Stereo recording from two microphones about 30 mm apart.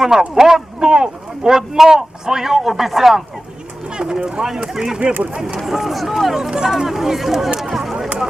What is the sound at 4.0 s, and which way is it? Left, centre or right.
Speech, right.